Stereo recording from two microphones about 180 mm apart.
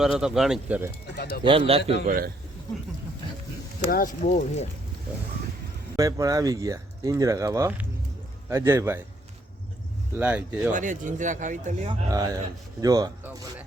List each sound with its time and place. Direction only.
0.0 s speech: 5° right (ahead or behind)
1.1 s speech: 65° left (ahead or behind)
1.5 s a man's voice: 30° right (ahead or behind)
1.8 s a man's voice: 70° left (ahead or behind)
2.0 s speech: 50° right (ahead or behind)
3.8 s speech: 50° left (ahead or behind)
6.0 s speech: 20° right (ahead or behind)
10.2 s speech: 10° right (ahead or behind)
10.7 s speech: 45° right (ahead or behind)
11.9 s speech: 20° right (ahead or behind)